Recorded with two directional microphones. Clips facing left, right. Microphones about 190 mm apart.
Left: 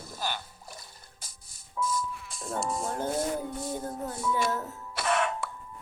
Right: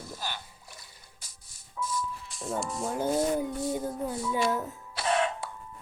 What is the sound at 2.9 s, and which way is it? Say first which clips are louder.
Speech: right 6 dB; 10° right (ahead or behind).